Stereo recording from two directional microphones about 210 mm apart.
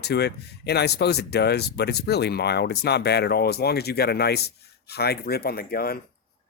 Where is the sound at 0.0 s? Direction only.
50° left (ahead or behind).